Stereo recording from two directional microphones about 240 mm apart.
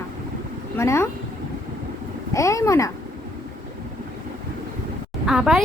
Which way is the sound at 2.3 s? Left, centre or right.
Centre.